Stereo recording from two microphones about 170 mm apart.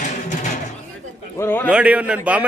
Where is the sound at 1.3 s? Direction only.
15° left (ahead or behind).